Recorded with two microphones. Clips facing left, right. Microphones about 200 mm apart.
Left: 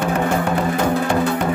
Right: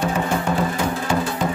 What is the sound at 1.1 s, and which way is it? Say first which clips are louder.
Music: left 4 dB; 60° left (ahead or behind).